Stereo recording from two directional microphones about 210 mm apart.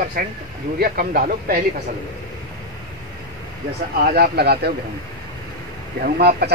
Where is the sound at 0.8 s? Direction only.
45° right (ahead or behind).